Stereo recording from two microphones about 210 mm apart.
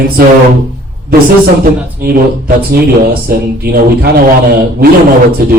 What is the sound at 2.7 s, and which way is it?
Speech, 45° right (ahead or behind).